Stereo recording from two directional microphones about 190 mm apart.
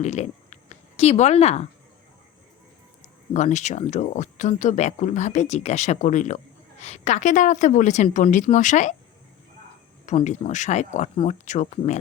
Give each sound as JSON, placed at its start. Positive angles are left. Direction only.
{"t": 0.0, "sound": "a sound", "side_deg": 35}
{"t": 3.3, "sound": "speech", "side_deg": 40}
{"t": 10.1, "sound": "speech", "side_deg": 35}